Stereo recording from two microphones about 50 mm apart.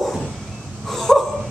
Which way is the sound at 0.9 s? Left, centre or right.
Centre.